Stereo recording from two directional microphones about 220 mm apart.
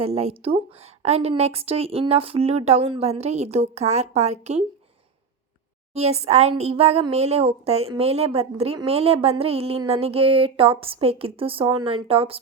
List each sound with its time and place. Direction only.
0.0 s speech: 25° right (ahead or behind)
5.9 s speech: 30° right (ahead or behind)